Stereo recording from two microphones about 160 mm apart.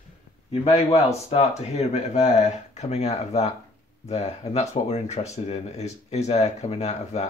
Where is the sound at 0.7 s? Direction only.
40° left (ahead or behind).